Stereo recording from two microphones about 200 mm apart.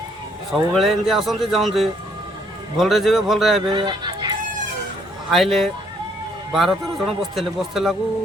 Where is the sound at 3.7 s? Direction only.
20° right (ahead or behind).